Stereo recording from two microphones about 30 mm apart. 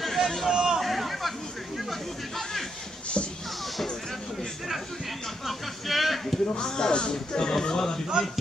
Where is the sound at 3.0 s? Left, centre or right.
Left.